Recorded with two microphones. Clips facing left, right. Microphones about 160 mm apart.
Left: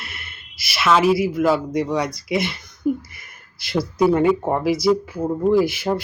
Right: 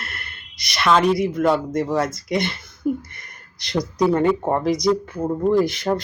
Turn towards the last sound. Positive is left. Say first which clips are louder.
# left 1 dB
turn(degrees=5)  # may be behind; listen again after turning